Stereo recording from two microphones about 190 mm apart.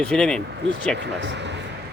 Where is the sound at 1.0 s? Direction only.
65° right (ahead or behind).